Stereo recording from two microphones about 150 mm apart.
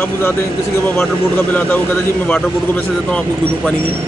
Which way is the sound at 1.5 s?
10° left (ahead or behind).